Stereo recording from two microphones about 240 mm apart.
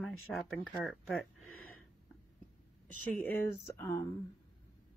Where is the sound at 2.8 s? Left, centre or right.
Centre.